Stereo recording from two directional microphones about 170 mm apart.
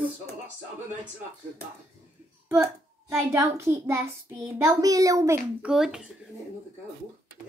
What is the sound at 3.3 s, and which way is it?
A child's voice, 15° right (ahead or behind).